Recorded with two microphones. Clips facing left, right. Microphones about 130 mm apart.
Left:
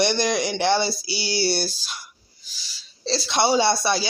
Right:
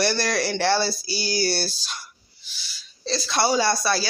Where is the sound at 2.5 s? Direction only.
30° left (ahead or behind).